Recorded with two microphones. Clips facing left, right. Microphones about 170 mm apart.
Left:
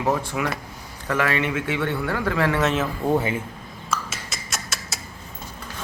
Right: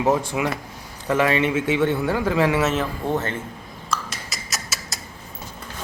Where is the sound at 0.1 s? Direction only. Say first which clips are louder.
Right 1 dB; 20° right (ahead or behind).